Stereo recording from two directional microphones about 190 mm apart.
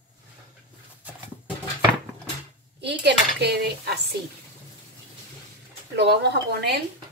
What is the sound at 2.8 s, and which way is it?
A woman's voice, 60° right (ahead or behind).